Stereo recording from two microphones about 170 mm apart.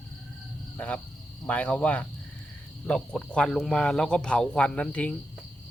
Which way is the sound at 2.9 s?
5° left (ahead or behind).